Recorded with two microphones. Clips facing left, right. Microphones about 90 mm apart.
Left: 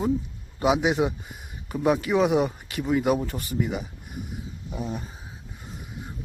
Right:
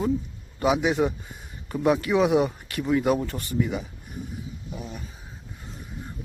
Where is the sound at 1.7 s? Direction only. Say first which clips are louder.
Right 1 dB; centre (ahead or behind).